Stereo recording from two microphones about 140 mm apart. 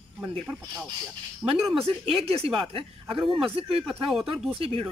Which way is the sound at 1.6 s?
Centre (ahead or behind).